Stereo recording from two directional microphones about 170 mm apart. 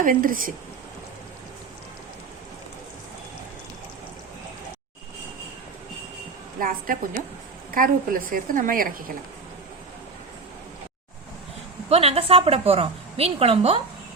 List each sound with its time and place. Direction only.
0.0 s a woman's voice: 55° right (ahead or behind)
6.6 s a woman's voice: 55° right (ahead or behind)
11.9 s a woman's voice: 35° right (ahead or behind)